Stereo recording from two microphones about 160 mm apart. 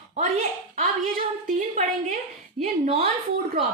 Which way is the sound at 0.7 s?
60° right (ahead or behind).